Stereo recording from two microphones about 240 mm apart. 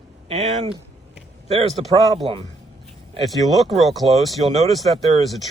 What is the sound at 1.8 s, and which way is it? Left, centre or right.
Speech, right.